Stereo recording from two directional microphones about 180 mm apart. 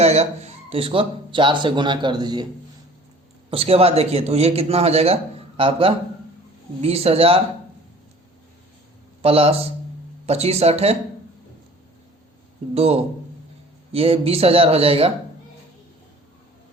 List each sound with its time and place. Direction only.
0.0 s speech: 35° right (ahead or behind)
3.5 s a man's voice: 35° right (ahead or behind)
9.2 s speech: 30° right (ahead or behind)
12.7 s speech: 35° right (ahead or behind)